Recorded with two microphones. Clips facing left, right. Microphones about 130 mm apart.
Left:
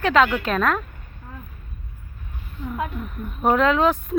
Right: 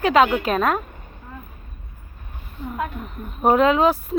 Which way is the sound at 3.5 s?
10° right (ahead or behind).